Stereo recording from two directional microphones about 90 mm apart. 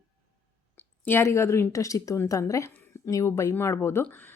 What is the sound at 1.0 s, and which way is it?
A woman's voice, 25° left (ahead or behind).